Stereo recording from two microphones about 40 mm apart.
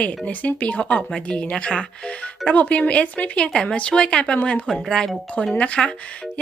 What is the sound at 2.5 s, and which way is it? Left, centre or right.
Speech, left.